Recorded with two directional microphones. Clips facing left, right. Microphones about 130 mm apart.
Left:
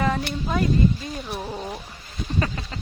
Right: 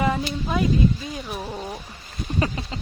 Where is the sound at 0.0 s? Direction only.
10° right (ahead or behind).